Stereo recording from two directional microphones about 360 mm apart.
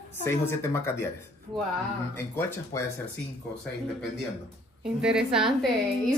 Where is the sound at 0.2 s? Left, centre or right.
Centre.